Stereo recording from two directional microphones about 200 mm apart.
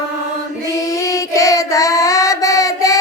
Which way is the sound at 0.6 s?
15° left (ahead or behind).